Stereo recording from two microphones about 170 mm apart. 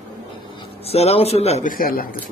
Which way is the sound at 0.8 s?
35° left (ahead or behind).